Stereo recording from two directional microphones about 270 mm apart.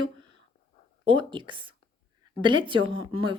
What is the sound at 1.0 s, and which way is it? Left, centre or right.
A woman's voice, centre.